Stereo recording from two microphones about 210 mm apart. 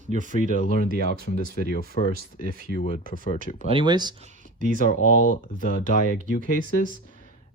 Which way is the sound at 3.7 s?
20° right (ahead or behind).